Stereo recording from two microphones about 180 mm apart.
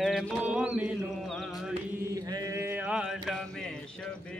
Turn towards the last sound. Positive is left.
turn(degrees=0)  # may be behind; listen again after turning